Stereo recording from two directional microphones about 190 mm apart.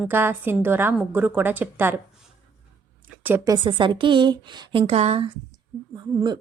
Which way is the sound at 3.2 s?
15° right (ahead or behind).